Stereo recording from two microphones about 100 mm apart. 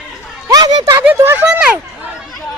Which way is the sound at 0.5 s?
45° right (ahead or behind).